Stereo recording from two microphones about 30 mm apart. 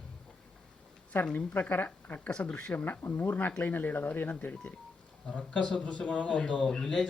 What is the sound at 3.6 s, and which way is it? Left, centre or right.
Speech, left.